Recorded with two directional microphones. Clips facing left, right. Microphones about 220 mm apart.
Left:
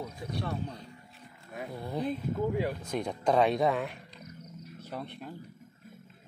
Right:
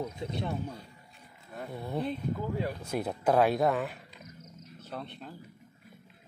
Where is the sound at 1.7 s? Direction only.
Centre (ahead or behind).